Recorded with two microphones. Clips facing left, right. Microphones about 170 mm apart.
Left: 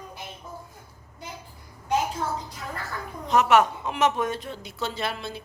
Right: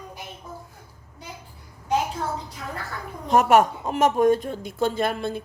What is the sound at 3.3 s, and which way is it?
Speech, 45° right (ahead or behind).